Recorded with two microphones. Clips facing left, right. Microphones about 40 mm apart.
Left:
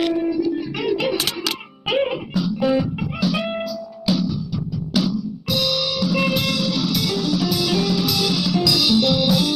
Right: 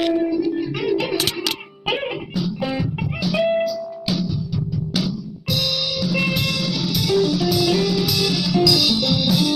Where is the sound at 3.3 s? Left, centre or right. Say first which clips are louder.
Right 8 dB; centre.